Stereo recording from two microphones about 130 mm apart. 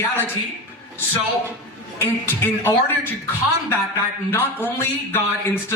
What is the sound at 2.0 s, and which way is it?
A man's voice, 15° left (ahead or behind).